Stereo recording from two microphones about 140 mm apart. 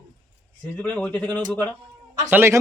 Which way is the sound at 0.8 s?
10° left (ahead or behind).